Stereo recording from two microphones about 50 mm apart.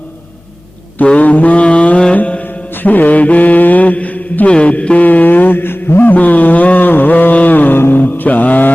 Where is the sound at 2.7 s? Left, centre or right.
Left.